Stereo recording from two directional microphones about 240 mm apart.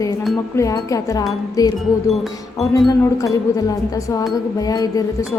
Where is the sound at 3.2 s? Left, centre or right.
Centre.